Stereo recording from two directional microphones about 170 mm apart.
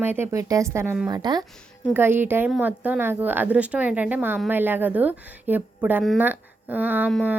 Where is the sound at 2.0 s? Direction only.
10° right (ahead or behind).